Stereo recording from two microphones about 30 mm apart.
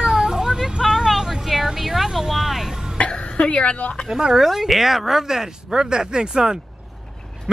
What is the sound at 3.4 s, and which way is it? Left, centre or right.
Speech, left.